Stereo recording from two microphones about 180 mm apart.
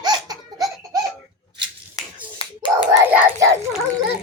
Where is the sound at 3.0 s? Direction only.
15° right (ahead or behind).